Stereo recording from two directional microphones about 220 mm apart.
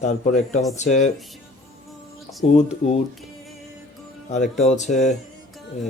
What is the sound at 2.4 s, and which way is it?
Speech, 30° left (ahead or behind).